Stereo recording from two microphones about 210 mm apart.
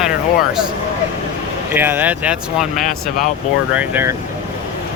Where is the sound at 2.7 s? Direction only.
40° left (ahead or behind).